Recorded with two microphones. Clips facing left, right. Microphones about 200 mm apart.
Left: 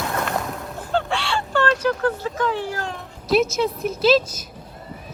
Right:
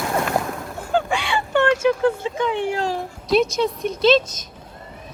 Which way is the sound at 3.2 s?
5° left (ahead or behind).